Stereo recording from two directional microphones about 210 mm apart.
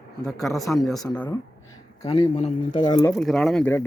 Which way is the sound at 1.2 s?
15° left (ahead or behind).